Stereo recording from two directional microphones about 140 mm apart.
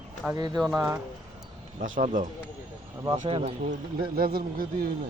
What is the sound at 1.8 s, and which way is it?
Speech, 70° right (ahead or behind).